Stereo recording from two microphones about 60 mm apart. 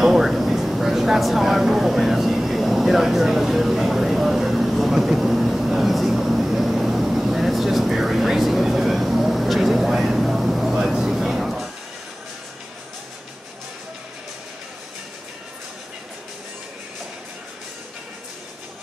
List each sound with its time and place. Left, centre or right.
0.0 s vehicle: centre